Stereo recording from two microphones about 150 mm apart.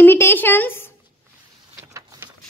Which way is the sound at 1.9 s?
20° right (ahead or behind).